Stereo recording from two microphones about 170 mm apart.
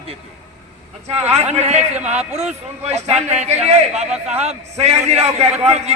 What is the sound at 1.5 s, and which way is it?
A man's voice, 40° right (ahead or behind).